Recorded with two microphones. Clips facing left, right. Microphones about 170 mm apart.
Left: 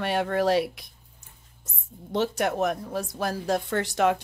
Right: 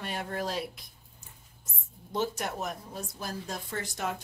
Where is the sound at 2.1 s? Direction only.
70° left (ahead or behind).